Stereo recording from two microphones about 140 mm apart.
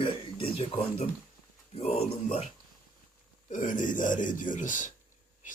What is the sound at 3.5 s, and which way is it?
A man's voice, 65° left (ahead or behind).